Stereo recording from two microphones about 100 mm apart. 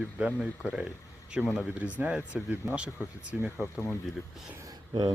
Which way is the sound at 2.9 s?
30° left (ahead or behind).